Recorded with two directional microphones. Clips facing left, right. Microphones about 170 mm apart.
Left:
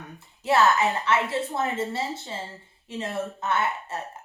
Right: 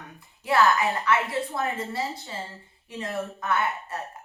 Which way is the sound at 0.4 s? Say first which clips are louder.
Left 1 dB; 25° left (ahead or behind).